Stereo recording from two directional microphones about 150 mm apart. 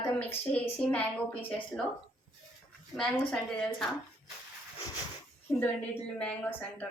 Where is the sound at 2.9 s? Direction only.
5° left (ahead or behind).